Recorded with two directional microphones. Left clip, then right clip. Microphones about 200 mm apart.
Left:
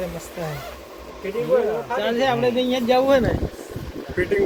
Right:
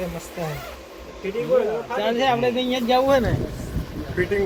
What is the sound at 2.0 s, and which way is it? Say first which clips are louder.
Speech: right 1 dB; 15° left (ahead or behind).